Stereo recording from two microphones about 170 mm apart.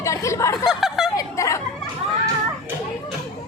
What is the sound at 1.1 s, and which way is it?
Speech, 20° left (ahead or behind).